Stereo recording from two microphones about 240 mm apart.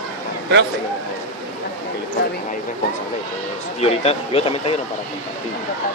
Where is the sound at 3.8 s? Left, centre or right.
Left.